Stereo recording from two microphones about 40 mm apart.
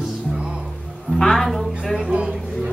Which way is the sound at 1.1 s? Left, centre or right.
Centre.